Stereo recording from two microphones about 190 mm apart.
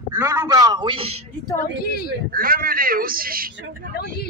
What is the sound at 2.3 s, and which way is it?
Speech, 50° right (ahead or behind).